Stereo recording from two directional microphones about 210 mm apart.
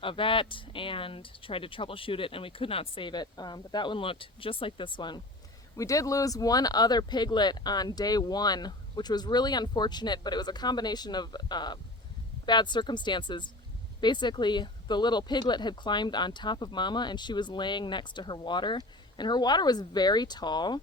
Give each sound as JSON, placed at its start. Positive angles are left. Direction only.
{"t": 0.0, "sound": "speech", "side_deg": 25}